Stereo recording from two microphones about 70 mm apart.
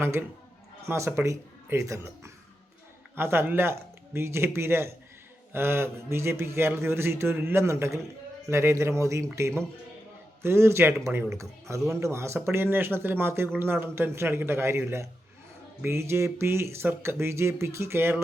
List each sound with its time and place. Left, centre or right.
0.0 s a man's voice: right
3.2 s a man's voice: right